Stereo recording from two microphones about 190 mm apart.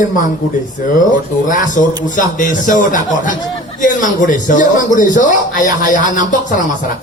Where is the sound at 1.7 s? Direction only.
45° left (ahead or behind).